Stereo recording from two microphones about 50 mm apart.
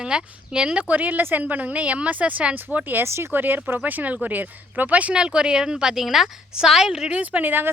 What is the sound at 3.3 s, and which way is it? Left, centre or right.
A woman's voice, right.